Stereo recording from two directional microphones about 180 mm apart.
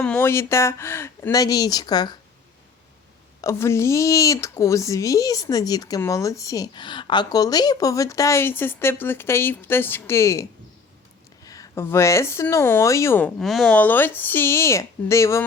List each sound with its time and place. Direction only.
0.0 s speech: 10° left (ahead or behind)
3.4 s speech: 15° left (ahead or behind)
11.4 s speech: 20° left (ahead or behind)
13.4 s speech: centre (ahead or behind)